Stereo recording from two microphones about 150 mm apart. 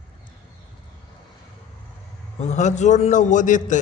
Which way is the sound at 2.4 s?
50° left (ahead or behind).